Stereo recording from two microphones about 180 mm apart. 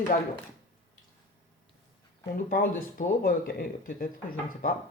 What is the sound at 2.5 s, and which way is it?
Speech, 50° left (ahead or behind).